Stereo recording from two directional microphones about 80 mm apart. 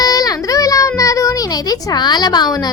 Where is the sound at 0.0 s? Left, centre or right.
Left.